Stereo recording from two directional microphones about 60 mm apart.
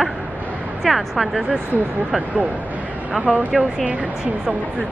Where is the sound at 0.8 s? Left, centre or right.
Centre.